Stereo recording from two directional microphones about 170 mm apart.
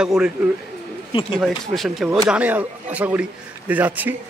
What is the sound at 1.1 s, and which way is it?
Speech, 30° left (ahead or behind).